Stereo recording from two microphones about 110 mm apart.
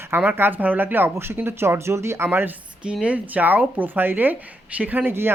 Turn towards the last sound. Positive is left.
turn(degrees=-20)  # may be behind; listen again after turning